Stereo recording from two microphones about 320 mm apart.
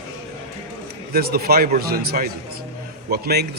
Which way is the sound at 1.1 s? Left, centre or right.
Right.